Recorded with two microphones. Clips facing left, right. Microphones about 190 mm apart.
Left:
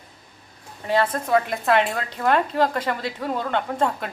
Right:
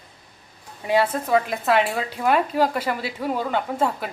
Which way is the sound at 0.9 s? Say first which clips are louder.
Right 1 dB; 10° right (ahead or behind).